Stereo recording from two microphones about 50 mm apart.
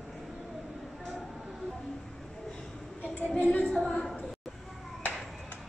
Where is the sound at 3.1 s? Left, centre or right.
Left.